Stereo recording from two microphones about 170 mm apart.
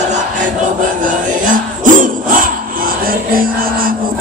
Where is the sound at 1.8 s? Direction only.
50° right (ahead or behind).